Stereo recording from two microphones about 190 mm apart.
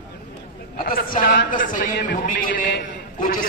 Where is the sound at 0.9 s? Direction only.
50° left (ahead or behind).